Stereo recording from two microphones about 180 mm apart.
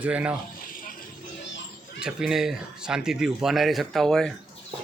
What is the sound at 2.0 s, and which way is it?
Speech, 5° right (ahead or behind).